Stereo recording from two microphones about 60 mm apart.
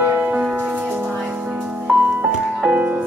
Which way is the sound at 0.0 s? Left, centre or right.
Right.